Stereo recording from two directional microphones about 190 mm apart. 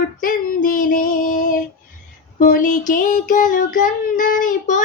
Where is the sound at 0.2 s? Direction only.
45° left (ahead or behind).